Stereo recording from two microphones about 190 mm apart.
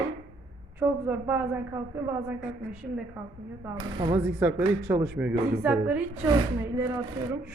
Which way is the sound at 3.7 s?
25° right (ahead or behind).